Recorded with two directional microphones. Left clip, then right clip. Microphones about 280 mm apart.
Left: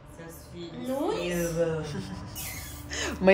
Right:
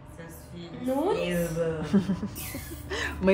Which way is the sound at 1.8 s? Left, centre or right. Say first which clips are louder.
Right 7 dB; centre.